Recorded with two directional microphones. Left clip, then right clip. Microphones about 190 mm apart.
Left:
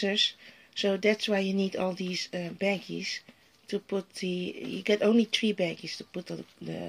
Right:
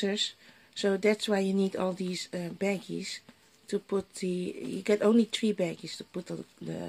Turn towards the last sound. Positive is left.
turn(degrees=-10)  # may be behind; listen again after turning